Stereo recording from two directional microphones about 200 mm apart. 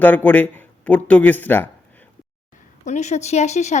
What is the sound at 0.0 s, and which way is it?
Speech, 10° left (ahead or behind).